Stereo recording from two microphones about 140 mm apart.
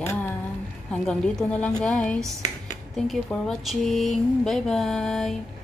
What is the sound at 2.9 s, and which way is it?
Mantra, centre (ahead or behind).